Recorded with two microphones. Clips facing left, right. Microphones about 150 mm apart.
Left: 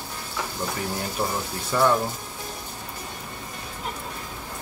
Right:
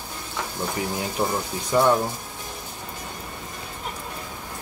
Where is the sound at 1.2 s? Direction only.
15° right (ahead or behind).